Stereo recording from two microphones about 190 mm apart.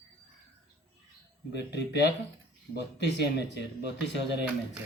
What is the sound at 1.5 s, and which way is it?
Speech, 65° left (ahead or behind).